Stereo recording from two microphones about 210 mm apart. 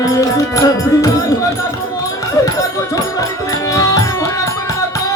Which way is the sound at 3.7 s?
15° left (ahead or behind).